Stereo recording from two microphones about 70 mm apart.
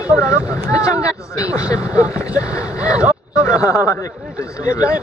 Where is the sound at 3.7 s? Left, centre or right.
Left.